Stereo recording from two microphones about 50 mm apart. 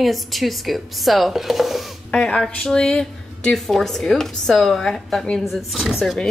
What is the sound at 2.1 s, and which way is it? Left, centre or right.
A woman's voice, centre.